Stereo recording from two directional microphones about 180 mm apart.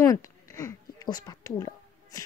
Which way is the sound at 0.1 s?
20° left (ahead or behind).